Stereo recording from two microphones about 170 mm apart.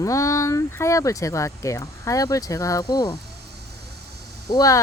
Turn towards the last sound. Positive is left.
turn(degrees=20)  # may be behind; listen again after turning